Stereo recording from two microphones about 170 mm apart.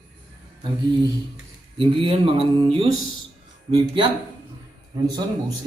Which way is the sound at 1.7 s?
30° right (ahead or behind).